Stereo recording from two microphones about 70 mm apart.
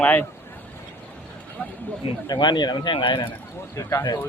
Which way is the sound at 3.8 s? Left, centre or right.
Left.